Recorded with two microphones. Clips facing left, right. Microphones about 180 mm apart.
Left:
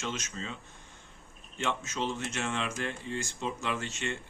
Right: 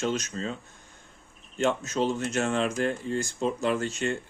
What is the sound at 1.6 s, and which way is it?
Speech, 40° right (ahead or behind).